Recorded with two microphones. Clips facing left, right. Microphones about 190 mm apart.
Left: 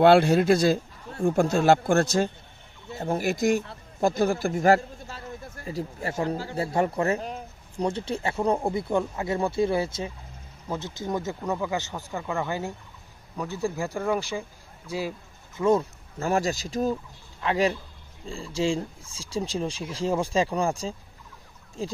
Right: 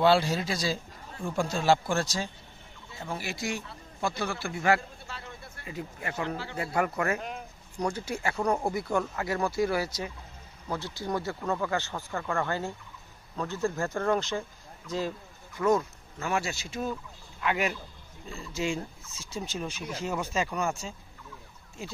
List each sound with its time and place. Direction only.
0.0 s a man's voice: 55° left (ahead or behind); by 15.1 s 10° left (ahead or behind)
15.5 s speech: 30° left (ahead or behind)